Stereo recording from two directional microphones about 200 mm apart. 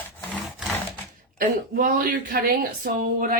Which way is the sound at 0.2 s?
Centre (ahead or behind).